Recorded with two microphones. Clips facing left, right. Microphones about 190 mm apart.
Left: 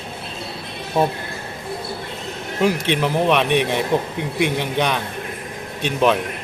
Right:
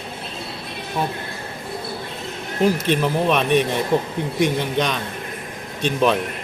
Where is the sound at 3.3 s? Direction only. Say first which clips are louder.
Even; 65° left (ahead or behind).